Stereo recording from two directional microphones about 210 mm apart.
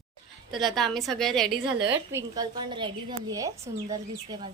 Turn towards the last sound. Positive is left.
turn(degrees=-15)  # may be behind; listen again after turning